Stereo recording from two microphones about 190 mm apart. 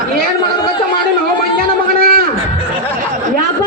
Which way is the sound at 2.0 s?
50° right (ahead or behind).